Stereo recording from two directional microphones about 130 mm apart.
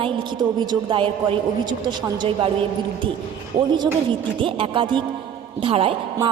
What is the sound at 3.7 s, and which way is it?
A woman's voice, 40° right (ahead or behind).